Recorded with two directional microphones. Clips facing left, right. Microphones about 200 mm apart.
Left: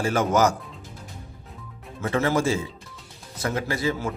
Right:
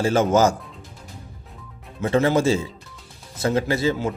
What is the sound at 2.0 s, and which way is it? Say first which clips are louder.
Speech: right 4 dB; 25° right (ahead or behind).